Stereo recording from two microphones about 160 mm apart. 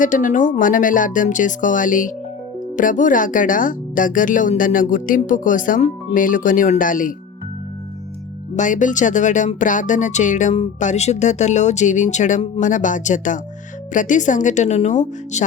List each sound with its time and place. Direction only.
0.0 s speech: 55° left (ahead or behind)
8.5 s speech: 50° left (ahead or behind)